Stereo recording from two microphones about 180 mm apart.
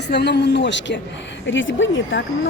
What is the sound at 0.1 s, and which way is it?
Speech, 70° left (ahead or behind).